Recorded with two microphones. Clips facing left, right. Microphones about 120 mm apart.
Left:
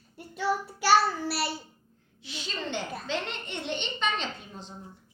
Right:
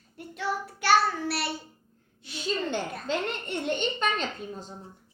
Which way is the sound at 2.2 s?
45° right (ahead or behind).